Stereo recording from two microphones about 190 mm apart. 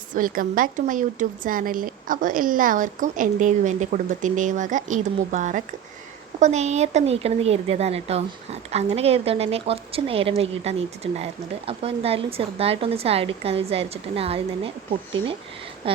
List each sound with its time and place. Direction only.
0.1 s a woman's voice: 45° right (ahead or behind); by 15.4 s 30° right (ahead or behind)